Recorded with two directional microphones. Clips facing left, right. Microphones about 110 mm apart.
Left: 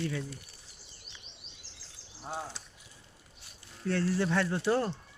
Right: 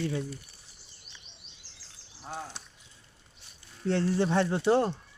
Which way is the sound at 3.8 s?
25° right (ahead or behind).